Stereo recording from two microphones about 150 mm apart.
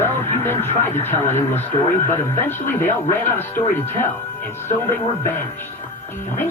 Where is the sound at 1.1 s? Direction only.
50° left (ahead or behind).